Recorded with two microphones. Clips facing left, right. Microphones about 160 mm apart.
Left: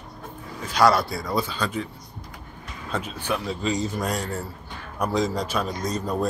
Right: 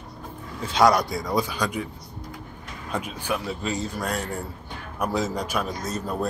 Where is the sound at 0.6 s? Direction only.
20° right (ahead or behind).